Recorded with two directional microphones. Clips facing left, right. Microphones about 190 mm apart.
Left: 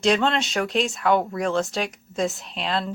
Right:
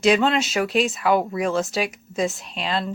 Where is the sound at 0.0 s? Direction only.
5° right (ahead or behind).